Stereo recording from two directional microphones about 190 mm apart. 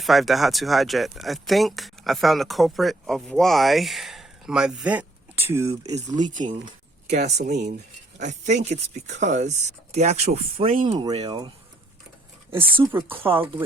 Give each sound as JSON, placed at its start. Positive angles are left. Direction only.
{"t": 0.0, "sound": "speech", "side_deg": 0}
{"t": 5.9, "sound": "speech", "side_deg": -40}
{"t": 7.1, "sound": "speech", "side_deg": -60}
{"t": 7.4, "sound": "speech", "side_deg": -40}
{"t": 11.3, "sound": "speech", "side_deg": -20}
{"t": 12.8, "sound": "speech", "side_deg": -10}